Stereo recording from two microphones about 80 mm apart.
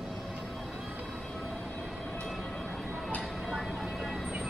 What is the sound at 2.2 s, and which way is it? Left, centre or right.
Vehicle, centre.